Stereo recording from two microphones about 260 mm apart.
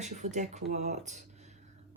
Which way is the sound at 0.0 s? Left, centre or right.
Right.